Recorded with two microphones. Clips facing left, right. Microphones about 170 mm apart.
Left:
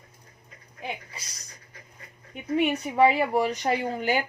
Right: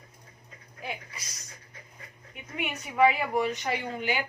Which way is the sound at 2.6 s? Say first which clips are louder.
Left 4 dB; 30° left (ahead or behind).